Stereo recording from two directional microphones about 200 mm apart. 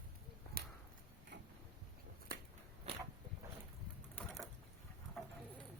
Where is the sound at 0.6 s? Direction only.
50° right (ahead or behind).